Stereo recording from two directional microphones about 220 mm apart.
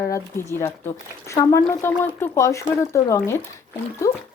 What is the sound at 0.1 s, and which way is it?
Speech, 15° left (ahead or behind).